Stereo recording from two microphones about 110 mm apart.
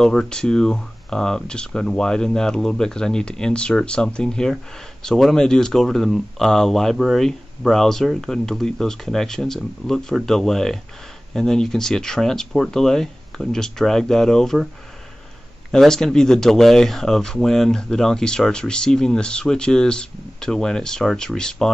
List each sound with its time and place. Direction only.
0.0 s speech: 5° left (ahead or behind)
15.7 s speech: 5° left (ahead or behind)